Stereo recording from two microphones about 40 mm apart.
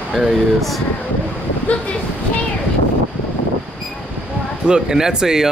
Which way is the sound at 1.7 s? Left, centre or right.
Left.